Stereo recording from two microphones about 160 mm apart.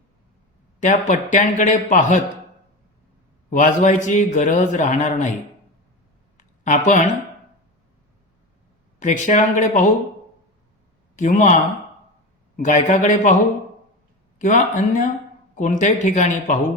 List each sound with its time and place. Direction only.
0.8 s a man's voice: 50° left (ahead or behind)
3.5 s a man's voice: 50° left (ahead or behind)
6.3 s a sound: 50° left (ahead or behind)
9.0 s a man's voice: 50° left (ahead or behind)
11.2 s a man's voice: 55° left (ahead or behind)
14.3 s a man's voice: 55° left (ahead or behind)